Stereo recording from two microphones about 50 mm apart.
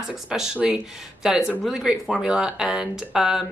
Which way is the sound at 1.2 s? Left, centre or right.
Centre.